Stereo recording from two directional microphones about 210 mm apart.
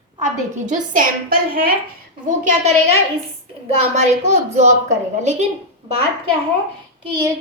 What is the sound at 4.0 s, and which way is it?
A woman's voice, 35° right (ahead or behind).